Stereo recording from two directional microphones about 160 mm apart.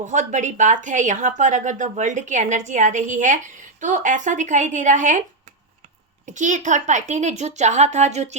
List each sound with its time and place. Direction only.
0.0 s speech: 50° right (ahead or behind)
6.2 s speech: 50° right (ahead or behind)